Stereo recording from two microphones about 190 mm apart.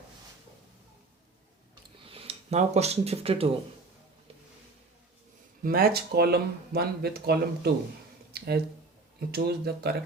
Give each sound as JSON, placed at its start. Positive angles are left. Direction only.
{"t": 2.0, "sound": "speech", "side_deg": -30}
{"t": 5.6, "sound": "speech", "side_deg": -50}
{"t": 8.3, "sound": "a sound", "side_deg": -55}
{"t": 9.3, "sound": "speech", "side_deg": -55}